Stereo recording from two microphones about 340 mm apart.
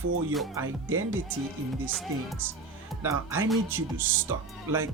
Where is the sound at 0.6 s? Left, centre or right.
Right.